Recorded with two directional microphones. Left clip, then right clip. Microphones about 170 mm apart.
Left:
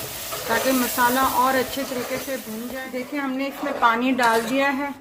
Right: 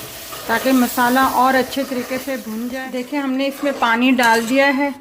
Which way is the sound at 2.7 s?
40° right (ahead or behind).